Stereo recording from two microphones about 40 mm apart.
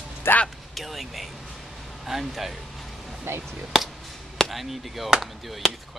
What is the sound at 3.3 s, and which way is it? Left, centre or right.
Speech, right.